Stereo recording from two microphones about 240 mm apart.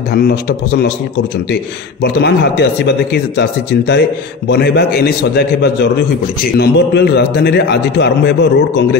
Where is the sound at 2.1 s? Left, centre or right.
Left.